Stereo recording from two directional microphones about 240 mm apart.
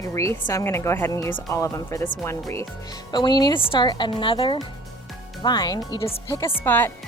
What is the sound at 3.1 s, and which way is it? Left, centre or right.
A woman's voice, centre.